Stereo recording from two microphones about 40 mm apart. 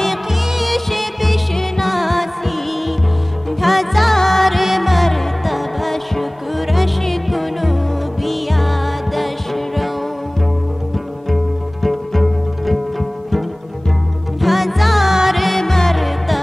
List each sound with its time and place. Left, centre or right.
0.0 s music: centre
3.6 s music: centre
11.2 s pizzicato: centre
14.4 s music: centre